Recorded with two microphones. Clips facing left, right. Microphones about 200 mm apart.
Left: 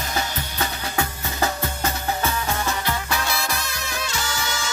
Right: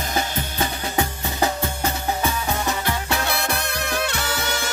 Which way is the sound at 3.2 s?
60° right (ahead or behind).